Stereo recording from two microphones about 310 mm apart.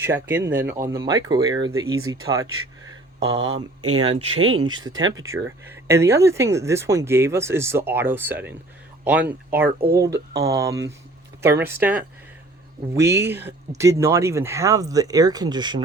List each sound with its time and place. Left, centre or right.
0.0 s speech: centre
3.8 s speech: right
4.6 s speech: centre
9.6 s speech: right
10.0 s speech: centre